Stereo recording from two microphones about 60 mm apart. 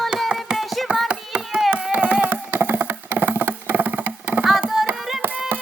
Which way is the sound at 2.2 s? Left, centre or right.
Right.